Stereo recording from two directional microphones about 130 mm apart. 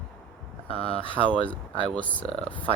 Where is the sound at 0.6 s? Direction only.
50° left (ahead or behind).